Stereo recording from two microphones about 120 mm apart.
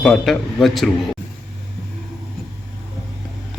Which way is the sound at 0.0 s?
5° left (ahead or behind).